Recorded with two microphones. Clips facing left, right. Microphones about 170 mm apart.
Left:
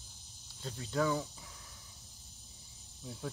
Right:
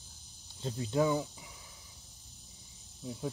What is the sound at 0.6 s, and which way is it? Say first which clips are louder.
Speech: right 4 dB; 20° right (ahead or behind).